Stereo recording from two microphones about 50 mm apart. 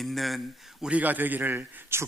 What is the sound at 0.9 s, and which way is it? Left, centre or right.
Speech, right.